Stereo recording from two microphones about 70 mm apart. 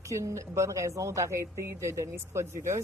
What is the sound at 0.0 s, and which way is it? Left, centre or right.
Speech, right.